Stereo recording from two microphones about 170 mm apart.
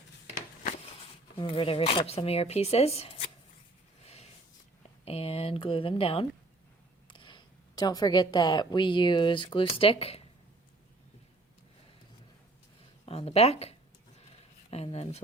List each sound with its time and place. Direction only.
1.4 s speech: 30° left (ahead or behind)
4.0 s a sound: 40° left (ahead or behind)
5.0 s a woman's voice: 35° left (ahead or behind)
13.1 s speech: 35° left (ahead or behind)